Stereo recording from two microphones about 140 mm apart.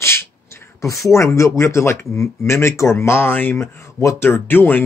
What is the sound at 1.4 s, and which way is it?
Speech, 20° left (ahead or behind).